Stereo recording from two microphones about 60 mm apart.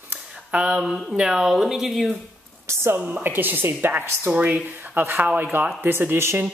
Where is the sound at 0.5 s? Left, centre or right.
Right.